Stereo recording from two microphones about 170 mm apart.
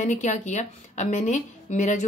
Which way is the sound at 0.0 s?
45° left (ahead or behind).